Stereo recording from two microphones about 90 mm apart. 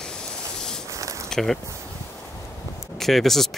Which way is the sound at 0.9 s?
35° right (ahead or behind).